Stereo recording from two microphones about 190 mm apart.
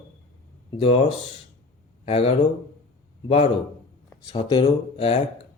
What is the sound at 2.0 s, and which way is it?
Speech, 30° left (ahead or behind).